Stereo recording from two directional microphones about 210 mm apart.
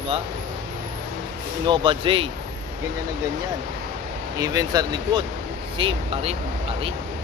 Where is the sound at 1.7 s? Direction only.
25° right (ahead or behind).